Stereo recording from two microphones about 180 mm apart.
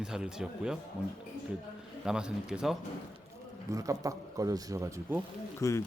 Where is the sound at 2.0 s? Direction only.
5° right (ahead or behind).